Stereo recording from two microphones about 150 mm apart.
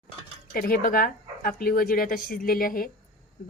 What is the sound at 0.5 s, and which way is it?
Speech, 70° left (ahead or behind).